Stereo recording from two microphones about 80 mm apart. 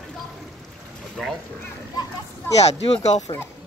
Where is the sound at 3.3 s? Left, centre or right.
Left.